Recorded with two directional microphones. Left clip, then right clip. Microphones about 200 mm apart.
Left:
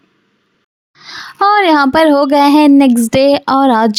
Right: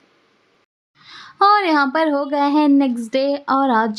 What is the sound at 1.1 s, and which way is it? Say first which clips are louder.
A woman's voice: left 3 dB; 30° left (ahead or behind).